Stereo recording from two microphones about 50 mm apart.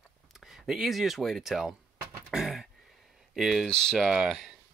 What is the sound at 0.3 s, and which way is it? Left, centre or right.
Speech, centre.